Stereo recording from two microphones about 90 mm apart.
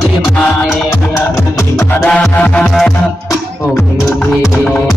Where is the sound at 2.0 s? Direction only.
10° left (ahead or behind).